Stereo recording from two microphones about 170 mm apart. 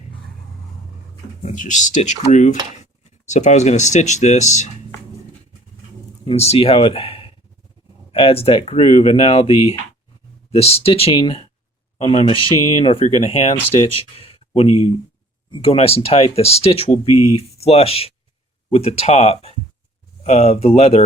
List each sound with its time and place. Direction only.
1.4 s speech: 45° left (ahead or behind)
6.2 s speech: 35° left (ahead or behind)